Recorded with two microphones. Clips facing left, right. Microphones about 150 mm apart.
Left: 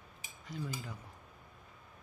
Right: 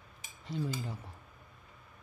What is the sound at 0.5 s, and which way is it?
Speech, 25° right (ahead or behind).